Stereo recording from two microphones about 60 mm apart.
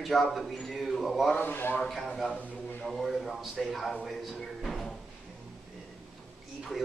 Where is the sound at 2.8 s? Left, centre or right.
Centre.